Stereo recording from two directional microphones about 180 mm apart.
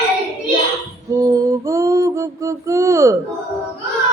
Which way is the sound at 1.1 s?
20° right (ahead or behind).